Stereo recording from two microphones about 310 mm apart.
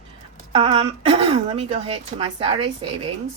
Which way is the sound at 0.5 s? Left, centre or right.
Centre.